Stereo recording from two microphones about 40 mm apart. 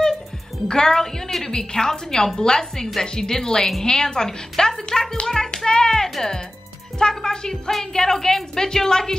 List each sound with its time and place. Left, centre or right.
0.7 s a woman's voice: centre